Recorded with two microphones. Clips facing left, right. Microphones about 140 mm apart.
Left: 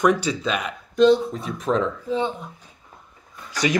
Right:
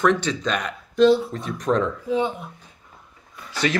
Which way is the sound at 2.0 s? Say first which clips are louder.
Right 1 dB; 10° right (ahead or behind).